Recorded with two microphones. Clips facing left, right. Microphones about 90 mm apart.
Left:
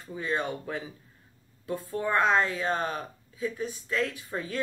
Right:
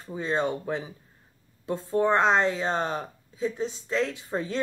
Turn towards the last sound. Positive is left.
turn(degrees=-25)  # may be behind; listen again after turning